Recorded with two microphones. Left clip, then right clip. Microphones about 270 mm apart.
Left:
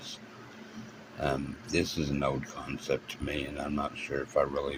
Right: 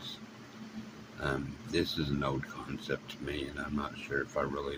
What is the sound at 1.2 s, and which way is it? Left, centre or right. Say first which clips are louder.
Speech: left 4 dB; centre.